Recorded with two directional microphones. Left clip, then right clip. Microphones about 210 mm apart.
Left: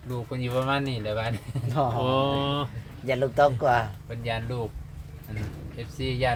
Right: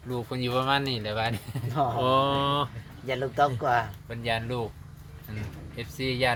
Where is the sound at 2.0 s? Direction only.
30° right (ahead or behind).